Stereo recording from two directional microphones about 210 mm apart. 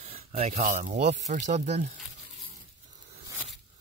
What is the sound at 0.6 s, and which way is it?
Speech, 35° right (ahead or behind).